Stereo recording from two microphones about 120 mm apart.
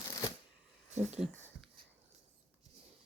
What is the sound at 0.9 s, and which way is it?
Speech, 70° right (ahead or behind).